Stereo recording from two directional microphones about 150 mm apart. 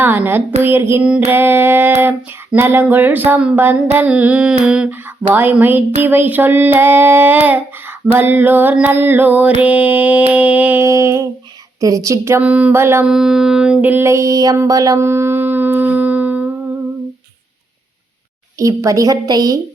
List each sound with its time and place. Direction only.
0.0 s child singing: 15° right (ahead or behind)
13.1 s a sound: 5° right (ahead or behind)
18.6 s a woman's voice: 20° right (ahead or behind)